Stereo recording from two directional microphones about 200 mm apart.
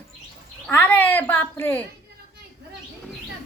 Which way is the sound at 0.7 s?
10° left (ahead or behind).